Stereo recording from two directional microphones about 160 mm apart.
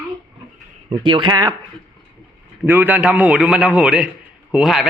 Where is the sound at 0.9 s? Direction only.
30° right (ahead or behind).